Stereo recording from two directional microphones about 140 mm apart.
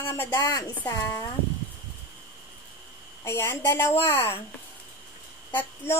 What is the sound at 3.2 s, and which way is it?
A woman's voice, 20° left (ahead or behind).